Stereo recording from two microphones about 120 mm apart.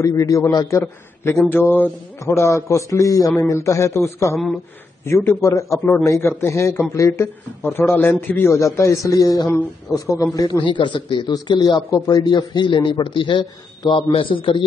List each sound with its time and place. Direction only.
0.0 s a man's voice: 25° left (ahead or behind)
10.6 s a man's voice: 40° left (ahead or behind)